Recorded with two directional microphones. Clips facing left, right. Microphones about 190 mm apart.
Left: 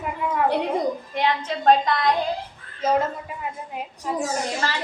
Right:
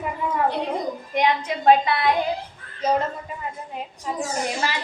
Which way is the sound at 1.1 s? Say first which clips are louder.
Right 6 dB; 15° right (ahead or behind).